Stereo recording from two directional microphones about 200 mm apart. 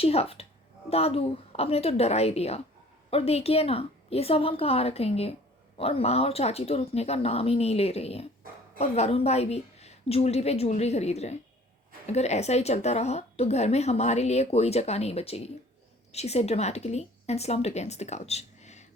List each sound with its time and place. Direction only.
0.0 s a woman's voice: 30° left (ahead or behind)